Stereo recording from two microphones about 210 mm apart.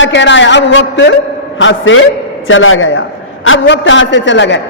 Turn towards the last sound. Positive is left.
turn(degrees=60)  # may be behind; listen again after turning